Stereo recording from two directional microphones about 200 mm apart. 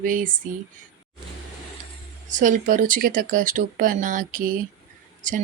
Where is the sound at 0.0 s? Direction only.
40° right (ahead or behind).